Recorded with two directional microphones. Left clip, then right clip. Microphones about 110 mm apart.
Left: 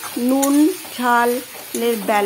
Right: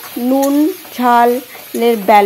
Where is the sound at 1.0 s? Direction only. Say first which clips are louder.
Right 6 dB; 30° right (ahead or behind).